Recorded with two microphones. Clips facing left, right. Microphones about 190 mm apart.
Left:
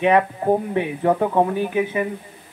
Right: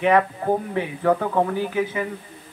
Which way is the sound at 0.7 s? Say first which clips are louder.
Left 1 dB; 20° left (ahead or behind).